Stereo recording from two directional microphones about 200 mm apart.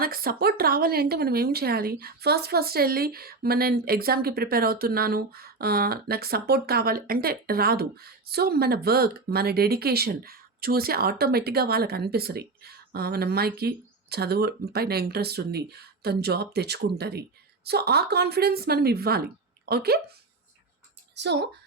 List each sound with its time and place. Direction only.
0.0 s speech: 50° right (ahead or behind)
21.2 s a child's voice: 60° right (ahead or behind)